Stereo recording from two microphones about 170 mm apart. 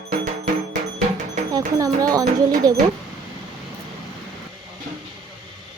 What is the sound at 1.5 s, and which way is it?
Speech, 20° right (ahead or behind).